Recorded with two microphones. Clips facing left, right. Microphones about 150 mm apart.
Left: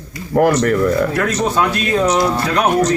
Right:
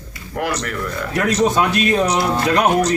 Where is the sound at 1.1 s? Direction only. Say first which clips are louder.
Even; 15° right (ahead or behind).